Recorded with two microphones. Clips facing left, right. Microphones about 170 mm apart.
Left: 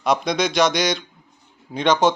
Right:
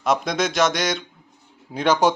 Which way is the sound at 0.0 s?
Centre (ahead or behind).